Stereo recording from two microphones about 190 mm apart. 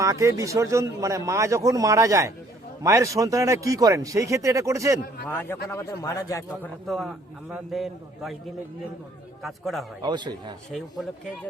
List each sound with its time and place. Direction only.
0.0 s a man's voice: 15° right (ahead or behind)
5.3 s a man's voice: 10° left (ahead or behind)
6.8 s a man's voice: centre (ahead or behind)
9.4 s a man's voice: centre (ahead or behind)
10.0 s a man's voice: 25° right (ahead or behind)